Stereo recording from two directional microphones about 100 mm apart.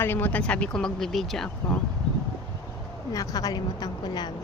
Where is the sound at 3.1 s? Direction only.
35° left (ahead or behind).